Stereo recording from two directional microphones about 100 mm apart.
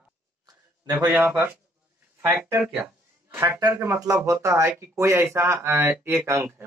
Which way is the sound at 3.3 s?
30° right (ahead or behind).